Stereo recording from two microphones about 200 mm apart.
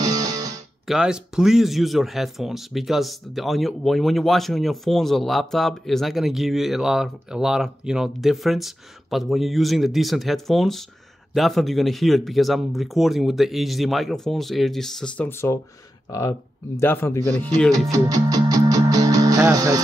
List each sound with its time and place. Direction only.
0.0 s music: 20° right (ahead or behind)
0.8 s speech: 5° right (ahead or behind)
17.7 s music: 20° right (ahead or behind)